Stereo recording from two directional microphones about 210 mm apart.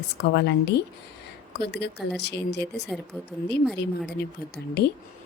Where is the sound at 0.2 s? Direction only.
55° left (ahead or behind).